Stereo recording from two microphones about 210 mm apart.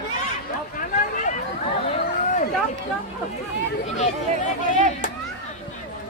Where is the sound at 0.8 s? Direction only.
35° left (ahead or behind).